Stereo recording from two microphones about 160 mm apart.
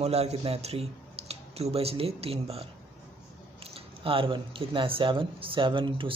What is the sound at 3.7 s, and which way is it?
Speech, 35° right (ahead or behind).